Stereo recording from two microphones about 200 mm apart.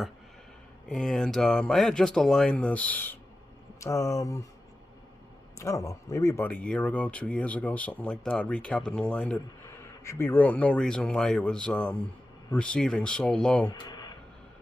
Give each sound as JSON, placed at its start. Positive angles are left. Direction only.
{"t": 0.8, "sound": "speech", "side_deg": 0}
{"t": 5.6, "sound": "speech", "side_deg": 15}
{"t": 13.7, "sound": "a sound", "side_deg": 20}